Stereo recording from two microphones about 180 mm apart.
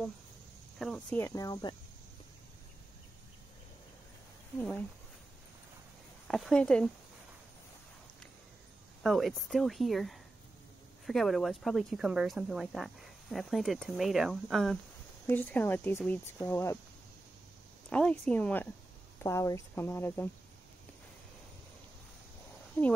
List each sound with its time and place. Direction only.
0.7 s speech: centre (ahead or behind)
1.1 s speech: 15° left (ahead or behind)
4.6 s speech: 5° left (ahead or behind)
6.2 s speech: centre (ahead or behind)
9.0 s speech: centre (ahead or behind)
17.8 s speech: 5° left (ahead or behind)